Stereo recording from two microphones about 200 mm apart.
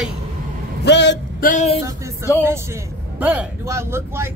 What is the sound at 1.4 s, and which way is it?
Speech, 35° left (ahead or behind).